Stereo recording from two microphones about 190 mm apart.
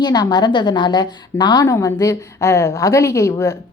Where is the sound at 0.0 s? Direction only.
20° left (ahead or behind).